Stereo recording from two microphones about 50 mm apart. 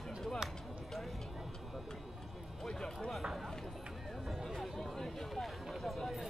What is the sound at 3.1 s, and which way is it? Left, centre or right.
Speech, centre.